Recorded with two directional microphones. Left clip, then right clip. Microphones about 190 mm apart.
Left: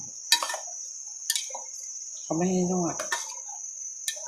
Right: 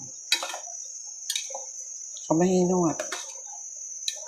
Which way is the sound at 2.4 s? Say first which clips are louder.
Right 4 dB; 30° right (ahead or behind).